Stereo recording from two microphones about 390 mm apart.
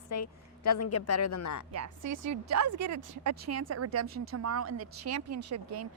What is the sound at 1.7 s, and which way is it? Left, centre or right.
A woman's voice, right.